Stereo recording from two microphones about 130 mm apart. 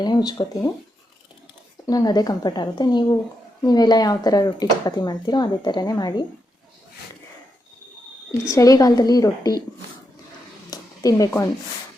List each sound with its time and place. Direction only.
0.0 s speech: 30° left (ahead or behind)
1.9 s speech: 30° left (ahead or behind)
8.4 s a woman's voice: 25° left (ahead or behind)
10.7 s a sound: 25° left (ahead or behind)